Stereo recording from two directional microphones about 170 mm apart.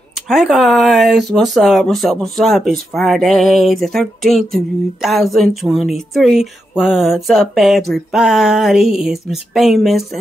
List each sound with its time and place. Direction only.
0.3 s speech: centre (ahead or behind)